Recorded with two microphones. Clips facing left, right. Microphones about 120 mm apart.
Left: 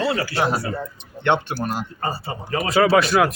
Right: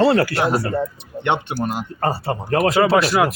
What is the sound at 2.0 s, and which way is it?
Speech, 65° right (ahead or behind).